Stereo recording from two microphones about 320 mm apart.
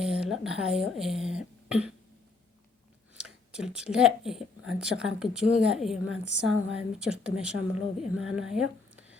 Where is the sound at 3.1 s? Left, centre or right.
Centre.